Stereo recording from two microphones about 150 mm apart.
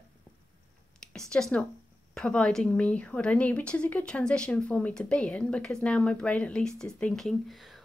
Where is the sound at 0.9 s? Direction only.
5° left (ahead or behind).